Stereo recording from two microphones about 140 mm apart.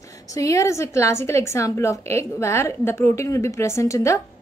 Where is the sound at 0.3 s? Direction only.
20° left (ahead or behind).